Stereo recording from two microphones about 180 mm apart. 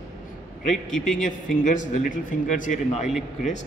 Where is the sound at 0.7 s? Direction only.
Centre (ahead or behind).